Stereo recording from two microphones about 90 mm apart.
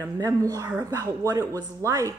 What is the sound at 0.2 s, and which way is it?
Speech, 40° right (ahead or behind).